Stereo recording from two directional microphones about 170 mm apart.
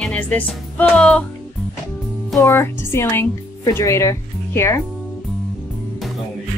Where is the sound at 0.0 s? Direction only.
5° left (ahead or behind).